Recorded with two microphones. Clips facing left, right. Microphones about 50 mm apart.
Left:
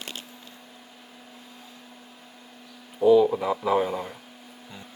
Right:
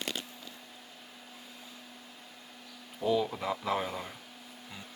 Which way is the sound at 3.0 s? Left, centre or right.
Centre.